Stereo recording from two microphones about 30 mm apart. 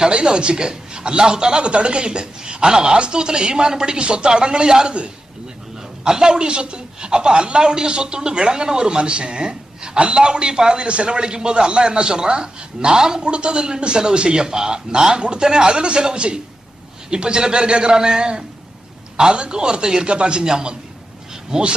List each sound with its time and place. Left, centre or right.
0.1 s speech: right
6.1 s speech: right
10.8 s speech: right
13.3 s a man's voice: right
20.4 s speech: right